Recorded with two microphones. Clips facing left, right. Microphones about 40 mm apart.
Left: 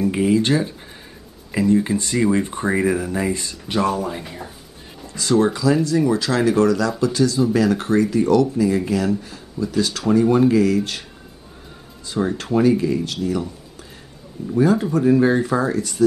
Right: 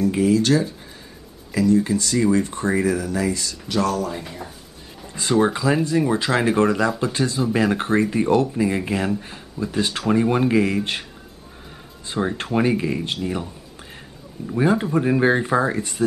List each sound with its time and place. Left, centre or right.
0.0 s speech: left
4.2 s speech: centre
5.0 s speech: right
12.2 s speech: centre
12.5 s speech: right
14.5 s speech: right